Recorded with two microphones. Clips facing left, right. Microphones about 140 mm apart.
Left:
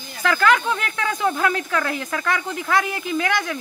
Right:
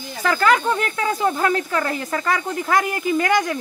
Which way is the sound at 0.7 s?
35° right (ahead or behind).